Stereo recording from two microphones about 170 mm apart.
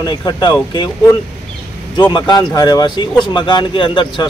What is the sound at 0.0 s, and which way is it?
Speech, 25° left (ahead or behind).